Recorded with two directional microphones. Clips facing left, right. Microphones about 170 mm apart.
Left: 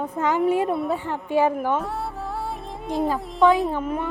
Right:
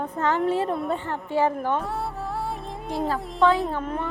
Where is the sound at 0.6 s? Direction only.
Centre (ahead or behind).